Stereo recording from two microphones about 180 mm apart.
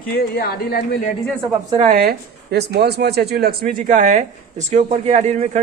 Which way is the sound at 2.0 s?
65° right (ahead or behind).